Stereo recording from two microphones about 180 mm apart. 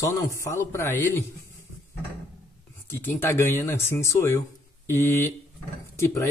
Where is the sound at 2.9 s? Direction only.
15° left (ahead or behind).